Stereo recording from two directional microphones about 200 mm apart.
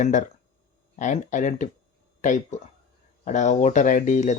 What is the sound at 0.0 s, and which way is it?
Speech, 40° left (ahead or behind).